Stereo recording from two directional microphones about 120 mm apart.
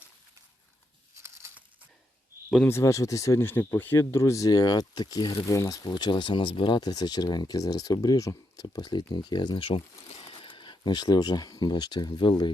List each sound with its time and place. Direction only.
1.2 s crumpling: 20° right (ahead or behind)
2.6 s speech: 25° left (ahead or behind)
5.5 s speech: 25° left (ahead or behind)